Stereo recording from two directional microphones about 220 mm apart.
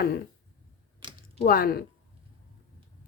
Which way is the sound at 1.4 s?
40° left (ahead or behind).